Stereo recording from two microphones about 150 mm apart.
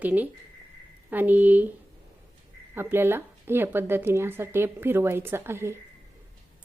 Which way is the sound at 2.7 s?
15° right (ahead or behind).